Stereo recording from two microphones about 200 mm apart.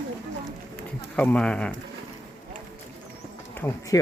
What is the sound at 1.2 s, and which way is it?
Speech, 5° left (ahead or behind).